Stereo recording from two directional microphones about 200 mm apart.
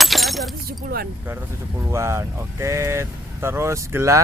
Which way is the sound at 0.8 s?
50° right (ahead or behind).